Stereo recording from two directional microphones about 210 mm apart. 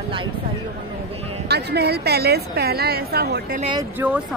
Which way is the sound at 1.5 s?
50° right (ahead or behind).